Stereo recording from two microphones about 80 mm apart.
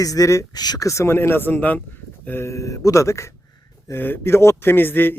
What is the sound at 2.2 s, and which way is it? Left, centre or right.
Speech, left.